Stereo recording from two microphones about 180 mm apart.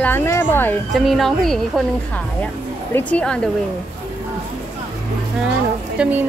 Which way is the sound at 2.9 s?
10° left (ahead or behind).